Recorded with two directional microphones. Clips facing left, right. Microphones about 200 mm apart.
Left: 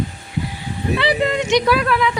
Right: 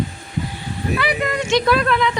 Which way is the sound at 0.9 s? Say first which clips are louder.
Left 4 dB; 25° left (ahead or behind).